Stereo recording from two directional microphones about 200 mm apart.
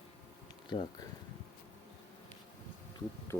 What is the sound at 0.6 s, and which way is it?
Speech, 25° left (ahead or behind).